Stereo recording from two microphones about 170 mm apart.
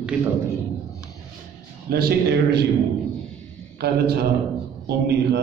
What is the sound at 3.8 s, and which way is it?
A man's voice, 70° right (ahead or behind).